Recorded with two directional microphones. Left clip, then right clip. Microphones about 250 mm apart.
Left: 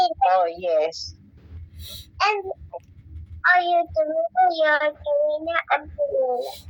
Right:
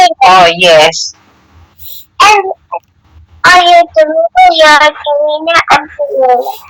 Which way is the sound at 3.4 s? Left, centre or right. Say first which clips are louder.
Right 15 dB; centre.